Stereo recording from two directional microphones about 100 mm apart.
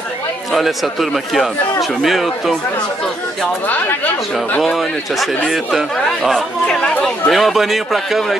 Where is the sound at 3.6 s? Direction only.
15° left (ahead or behind).